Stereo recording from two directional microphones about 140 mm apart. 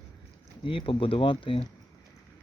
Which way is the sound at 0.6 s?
40° left (ahead or behind).